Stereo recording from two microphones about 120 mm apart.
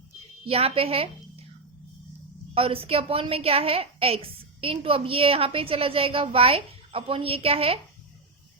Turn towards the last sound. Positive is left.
turn(degrees=-55)  # may be behind; listen again after turning